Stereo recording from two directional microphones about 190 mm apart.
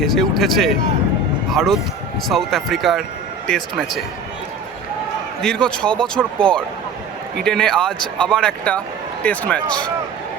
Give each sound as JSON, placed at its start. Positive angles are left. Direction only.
{"t": 0.0, "sound": "speech", "side_deg": 0}
{"t": 5.4, "sound": "speech", "side_deg": 5}